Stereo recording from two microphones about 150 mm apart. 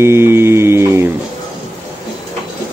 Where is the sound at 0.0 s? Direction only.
15° right (ahead or behind).